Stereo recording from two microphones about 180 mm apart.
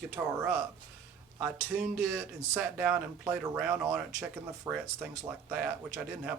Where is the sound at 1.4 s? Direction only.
5° right (ahead or behind).